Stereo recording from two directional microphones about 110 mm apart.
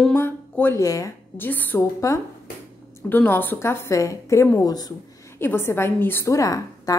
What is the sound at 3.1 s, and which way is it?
A woman's voice, 15° left (ahead or behind).